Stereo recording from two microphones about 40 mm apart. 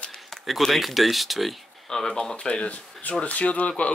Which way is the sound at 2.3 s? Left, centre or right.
Left.